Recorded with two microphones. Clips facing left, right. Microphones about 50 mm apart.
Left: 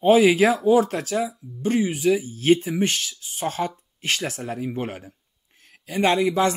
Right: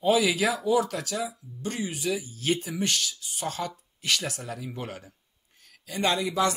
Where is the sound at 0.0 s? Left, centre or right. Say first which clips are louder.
Left 7 dB; left.